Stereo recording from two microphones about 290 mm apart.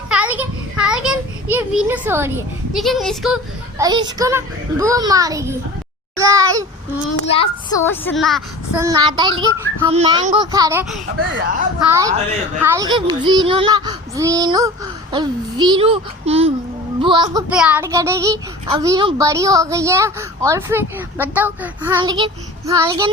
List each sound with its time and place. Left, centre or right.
0.1 s a sound: centre
3.8 s a child's voice: centre
7.3 s a child's voice: centre
17.5 s a child's voice: centre